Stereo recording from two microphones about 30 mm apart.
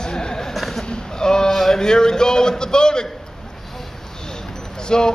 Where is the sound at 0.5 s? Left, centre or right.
Centre.